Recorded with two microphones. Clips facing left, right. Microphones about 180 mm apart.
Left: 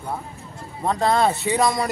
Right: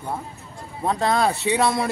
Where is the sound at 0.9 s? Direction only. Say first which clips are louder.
Left 1 dB; centre (ahead or behind).